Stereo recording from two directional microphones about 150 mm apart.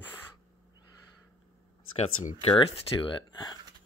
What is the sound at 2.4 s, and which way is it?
Speech, 35° left (ahead or behind).